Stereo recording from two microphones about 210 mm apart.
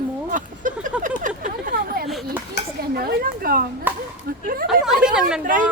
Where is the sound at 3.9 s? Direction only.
10° right (ahead or behind).